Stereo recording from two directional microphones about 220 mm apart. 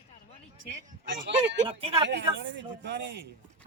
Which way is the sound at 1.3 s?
55° right (ahead or behind).